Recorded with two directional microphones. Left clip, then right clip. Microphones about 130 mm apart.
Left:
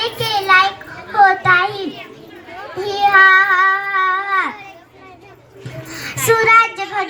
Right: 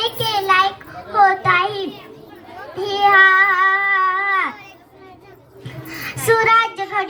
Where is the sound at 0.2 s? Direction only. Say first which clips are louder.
Left 4 dB; 25° left (ahead or behind).